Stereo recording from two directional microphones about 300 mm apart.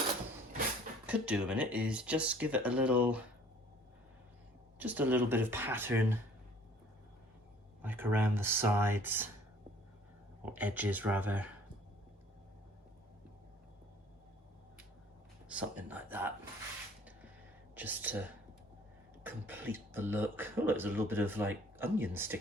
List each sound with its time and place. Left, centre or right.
1.0 s speech: centre
4.8 s speech: centre
7.8 s speech: centre
10.4 s speech: centre
15.4 s speech: centre
17.7 s speech: centre